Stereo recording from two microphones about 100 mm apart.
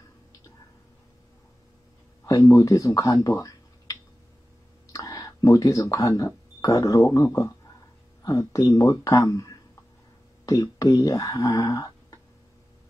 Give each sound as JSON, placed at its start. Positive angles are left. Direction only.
{"t": 2.2, "sound": "speech", "side_deg": 35}